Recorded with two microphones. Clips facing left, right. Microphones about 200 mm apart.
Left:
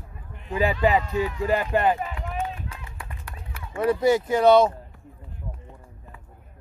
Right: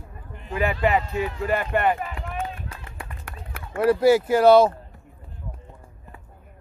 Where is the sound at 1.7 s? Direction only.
30° left (ahead or behind).